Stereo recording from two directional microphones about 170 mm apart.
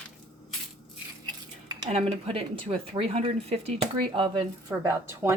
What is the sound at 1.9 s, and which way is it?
A woman's voice, 35° right (ahead or behind).